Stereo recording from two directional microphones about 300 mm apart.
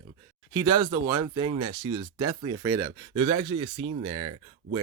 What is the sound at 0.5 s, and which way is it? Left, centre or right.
Speech, centre.